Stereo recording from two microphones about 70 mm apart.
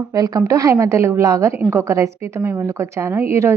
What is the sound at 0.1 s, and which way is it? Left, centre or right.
A woman's voice, right.